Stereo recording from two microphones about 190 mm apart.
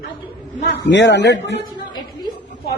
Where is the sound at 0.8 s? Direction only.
65° left (ahead or behind).